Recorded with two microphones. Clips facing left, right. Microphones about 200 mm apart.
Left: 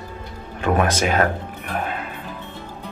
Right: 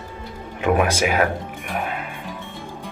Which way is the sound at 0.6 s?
15° right (ahead or behind).